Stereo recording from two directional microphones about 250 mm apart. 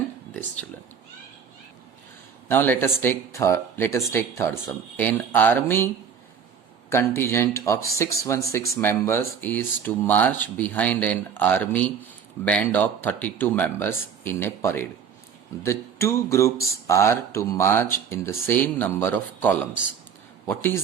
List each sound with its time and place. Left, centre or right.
2.5 s speech: centre
6.9 s speech: centre